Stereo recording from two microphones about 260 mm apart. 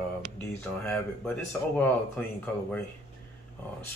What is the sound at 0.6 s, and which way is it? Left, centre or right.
Speech, centre.